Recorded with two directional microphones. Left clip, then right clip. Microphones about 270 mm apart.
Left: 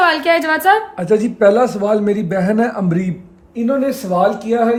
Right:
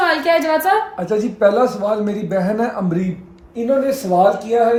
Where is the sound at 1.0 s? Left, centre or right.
Left.